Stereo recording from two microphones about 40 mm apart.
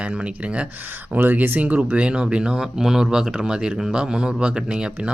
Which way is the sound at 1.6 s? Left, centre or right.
Right.